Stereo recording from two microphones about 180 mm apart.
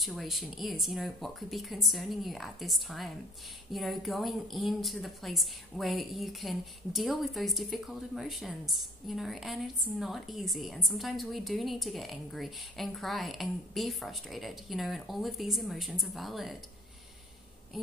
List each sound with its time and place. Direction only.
0.0 s a woman's voice: centre (ahead or behind)